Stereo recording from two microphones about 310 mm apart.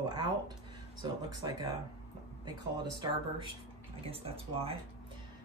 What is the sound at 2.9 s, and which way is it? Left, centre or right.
A man's voice, centre.